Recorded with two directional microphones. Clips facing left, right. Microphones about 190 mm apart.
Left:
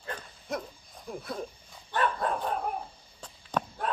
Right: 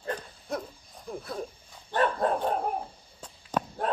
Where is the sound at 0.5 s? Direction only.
Centre (ahead or behind).